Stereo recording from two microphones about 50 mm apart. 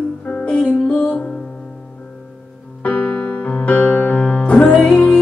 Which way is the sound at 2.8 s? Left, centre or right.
Left.